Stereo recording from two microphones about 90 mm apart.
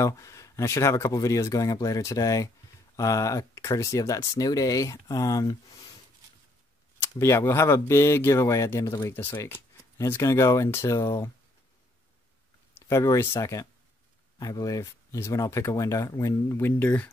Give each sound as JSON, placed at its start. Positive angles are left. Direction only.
{"t": 0.0, "sound": "speech", "side_deg": 35}
{"t": 7.0, "sound": "speech", "side_deg": 30}
{"t": 12.7, "sound": "speech", "side_deg": 30}